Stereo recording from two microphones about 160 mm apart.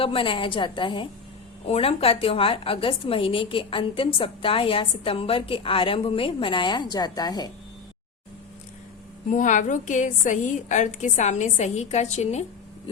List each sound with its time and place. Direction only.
0.0 s a woman's voice: 35° left (ahead or behind)
9.3 s a woman's voice: 50° left (ahead or behind)